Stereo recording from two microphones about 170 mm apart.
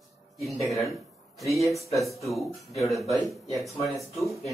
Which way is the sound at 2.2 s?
Centre (ahead or behind).